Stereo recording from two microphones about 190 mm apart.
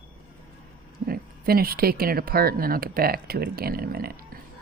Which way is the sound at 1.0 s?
50° right (ahead or behind).